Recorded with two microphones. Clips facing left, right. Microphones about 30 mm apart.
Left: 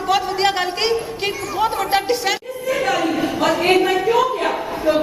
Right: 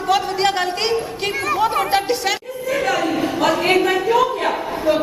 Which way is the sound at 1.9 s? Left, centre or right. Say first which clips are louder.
Even; centre.